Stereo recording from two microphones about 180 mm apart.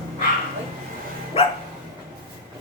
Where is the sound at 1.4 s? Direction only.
30° left (ahead or behind).